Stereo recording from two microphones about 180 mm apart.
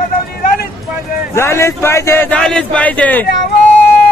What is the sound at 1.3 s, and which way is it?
Speech, 15° left (ahead or behind).